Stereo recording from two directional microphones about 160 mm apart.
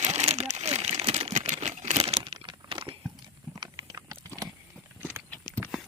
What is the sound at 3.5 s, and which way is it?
Clip-clop, 25° right (ahead or behind).